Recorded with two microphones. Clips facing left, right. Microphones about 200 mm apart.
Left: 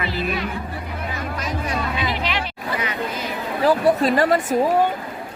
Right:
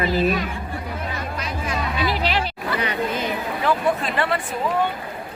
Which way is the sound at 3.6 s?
35° left (ahead or behind).